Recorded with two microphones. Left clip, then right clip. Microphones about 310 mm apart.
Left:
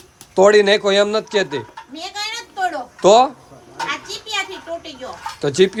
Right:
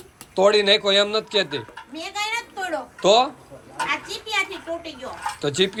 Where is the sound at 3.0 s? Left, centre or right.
Left.